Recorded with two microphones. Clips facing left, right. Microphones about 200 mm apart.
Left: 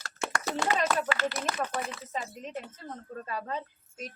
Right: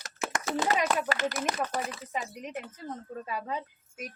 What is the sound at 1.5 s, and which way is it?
Bird, 20° right (ahead or behind).